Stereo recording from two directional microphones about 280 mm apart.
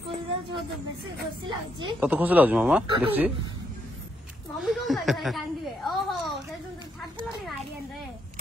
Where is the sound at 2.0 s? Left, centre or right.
Centre.